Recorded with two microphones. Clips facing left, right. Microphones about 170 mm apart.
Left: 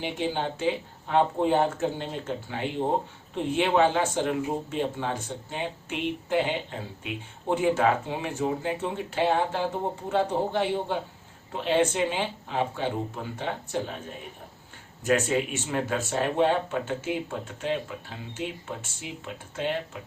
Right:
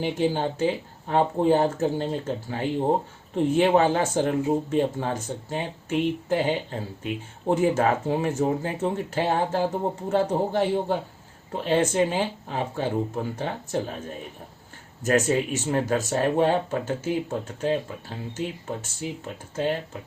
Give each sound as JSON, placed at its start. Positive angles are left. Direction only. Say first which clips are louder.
{"t": 0.0, "sound": "speech", "louder": "right 5 dB", "side_deg": -40}
{"t": 15.0, "sound": "speech", "louder": "right 2 dB", "side_deg": -40}